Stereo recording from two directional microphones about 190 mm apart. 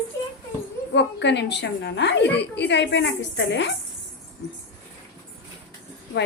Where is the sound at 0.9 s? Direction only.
65° left (ahead or behind).